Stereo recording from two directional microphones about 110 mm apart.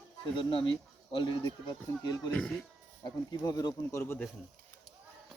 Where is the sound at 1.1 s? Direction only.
45° left (ahead or behind); by 4.1 s 25° left (ahead or behind).